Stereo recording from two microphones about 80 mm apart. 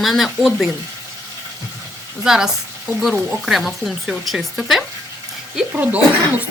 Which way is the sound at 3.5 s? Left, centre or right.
Centre.